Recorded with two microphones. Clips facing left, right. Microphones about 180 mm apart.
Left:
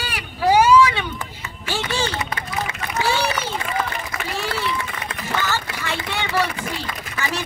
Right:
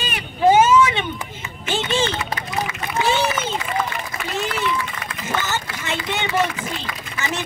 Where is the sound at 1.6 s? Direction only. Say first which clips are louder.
Right 3 dB; 20° right (ahead or behind).